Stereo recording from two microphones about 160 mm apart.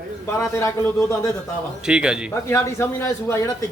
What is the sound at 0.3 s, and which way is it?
A man's voice, 20° left (ahead or behind).